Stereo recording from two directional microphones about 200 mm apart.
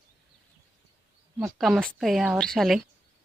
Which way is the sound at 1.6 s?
Centre (ahead or behind).